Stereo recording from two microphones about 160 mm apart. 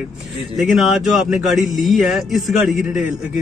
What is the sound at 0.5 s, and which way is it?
Speech, centre (ahead or behind).